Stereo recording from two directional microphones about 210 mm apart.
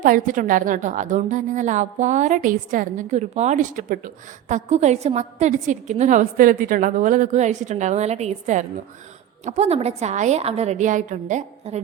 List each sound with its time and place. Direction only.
0.3 s a woman's voice: 40° right (ahead or behind)